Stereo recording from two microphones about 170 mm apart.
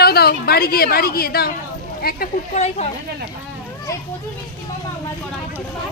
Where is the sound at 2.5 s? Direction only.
40° left (ahead or behind).